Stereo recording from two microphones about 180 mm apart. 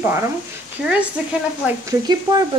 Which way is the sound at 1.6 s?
20° right (ahead or behind).